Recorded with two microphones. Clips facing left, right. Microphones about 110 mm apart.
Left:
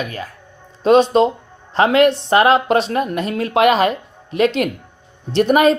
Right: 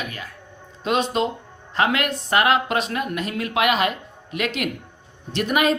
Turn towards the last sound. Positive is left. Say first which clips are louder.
# left 8 dB
turn(degrees=35)  # may be behind; listen again after turning